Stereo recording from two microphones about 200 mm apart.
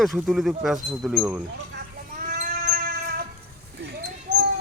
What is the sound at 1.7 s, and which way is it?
Cat, 45° right (ahead or behind).